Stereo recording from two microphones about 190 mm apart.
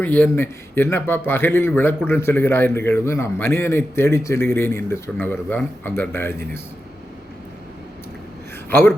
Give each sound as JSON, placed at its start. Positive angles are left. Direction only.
{"t": 0.0, "sound": "speech", "side_deg": 10}
{"t": 8.7, "sound": "speech", "side_deg": 10}